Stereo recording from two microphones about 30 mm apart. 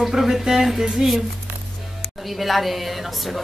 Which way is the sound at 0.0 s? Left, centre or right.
Centre.